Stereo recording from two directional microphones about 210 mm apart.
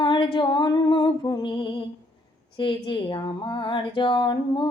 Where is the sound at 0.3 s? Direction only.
20° left (ahead or behind).